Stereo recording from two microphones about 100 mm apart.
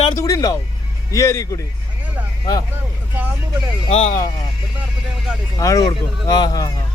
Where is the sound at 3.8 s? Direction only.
75° left (ahead or behind).